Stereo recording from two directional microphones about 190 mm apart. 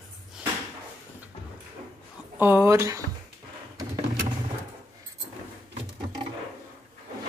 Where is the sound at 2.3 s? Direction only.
10° right (ahead or behind).